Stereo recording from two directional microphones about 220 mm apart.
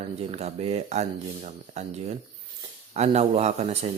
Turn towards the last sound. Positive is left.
turn(degrees=-30)  # may be behind; listen again after turning